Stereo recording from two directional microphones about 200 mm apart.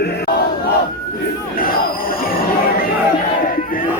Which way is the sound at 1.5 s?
45° left (ahead or behind).